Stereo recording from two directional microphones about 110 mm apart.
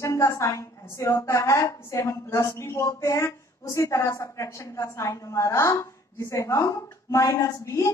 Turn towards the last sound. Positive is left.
turn(degrees=30)  # may be behind; listen again after turning